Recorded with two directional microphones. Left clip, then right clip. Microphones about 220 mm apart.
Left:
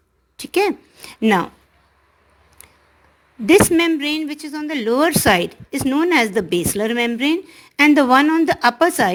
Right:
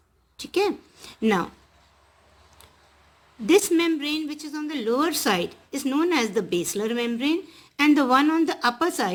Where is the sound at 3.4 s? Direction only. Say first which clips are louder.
Left 6 dB; 30° left (ahead or behind).